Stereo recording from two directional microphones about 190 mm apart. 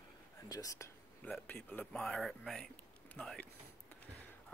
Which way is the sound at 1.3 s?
5° left (ahead or behind).